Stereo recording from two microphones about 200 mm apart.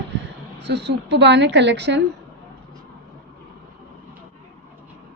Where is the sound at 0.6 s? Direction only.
55° right (ahead or behind).